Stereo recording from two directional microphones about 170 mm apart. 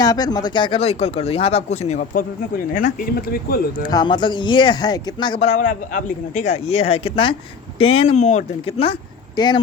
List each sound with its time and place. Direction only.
0.0 s speech: 20° left (ahead or behind); by 2.2 s 45° left (ahead or behind)
2.7 s speech: 55° left (ahead or behind)
3.8 s speech: 25° left (ahead or behind)
5.5 s speech: 50° left (ahead or behind); by 9.6 s 25° left (ahead or behind)